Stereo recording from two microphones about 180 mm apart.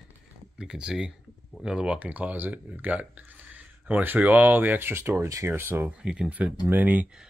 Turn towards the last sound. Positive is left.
turn(degrees=-5)  # may be behind; listen again after turning